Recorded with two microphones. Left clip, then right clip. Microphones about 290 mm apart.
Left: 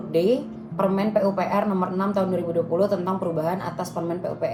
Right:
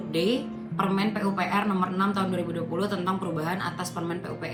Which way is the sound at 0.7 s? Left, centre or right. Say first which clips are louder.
Left 6 dB; right.